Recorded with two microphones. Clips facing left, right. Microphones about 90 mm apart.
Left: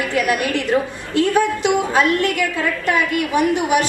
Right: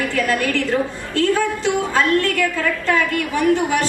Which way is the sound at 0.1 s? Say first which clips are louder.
Left 1 dB; 20° left (ahead or behind).